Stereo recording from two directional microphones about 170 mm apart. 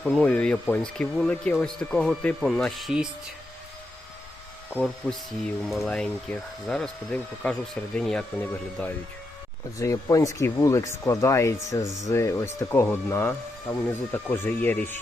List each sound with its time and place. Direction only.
0.0 s speech: 5° left (ahead or behind)
5.6 s speech: centre (ahead or behind)
9.7 s speech: 20° left (ahead or behind)